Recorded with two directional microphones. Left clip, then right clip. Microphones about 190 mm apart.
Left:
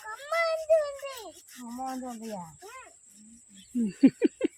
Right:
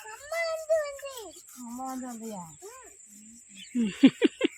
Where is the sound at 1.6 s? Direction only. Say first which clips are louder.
Left 1 dB; 25° left (ahead or behind).